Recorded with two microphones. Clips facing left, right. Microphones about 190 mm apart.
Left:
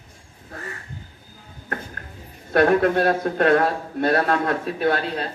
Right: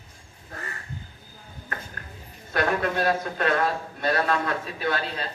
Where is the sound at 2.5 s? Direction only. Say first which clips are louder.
Left 8 dB; 55° left (ahead or behind).